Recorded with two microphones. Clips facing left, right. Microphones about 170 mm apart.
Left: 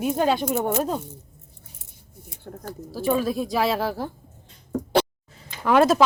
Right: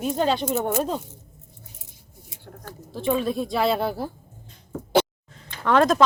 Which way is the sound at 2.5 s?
30° left (ahead or behind).